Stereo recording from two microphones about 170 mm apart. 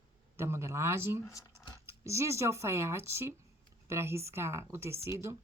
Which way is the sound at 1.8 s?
15° right (ahead or behind).